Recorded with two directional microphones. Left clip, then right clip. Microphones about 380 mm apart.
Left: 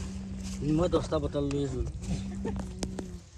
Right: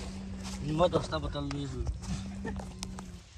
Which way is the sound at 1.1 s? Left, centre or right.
Centre.